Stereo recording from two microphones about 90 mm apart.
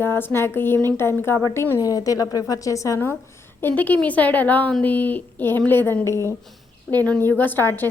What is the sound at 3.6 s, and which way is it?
Speech, 20° left (ahead or behind).